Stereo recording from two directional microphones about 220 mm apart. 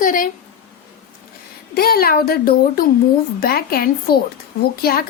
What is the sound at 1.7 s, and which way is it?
A woman's voice, 45° left (ahead or behind).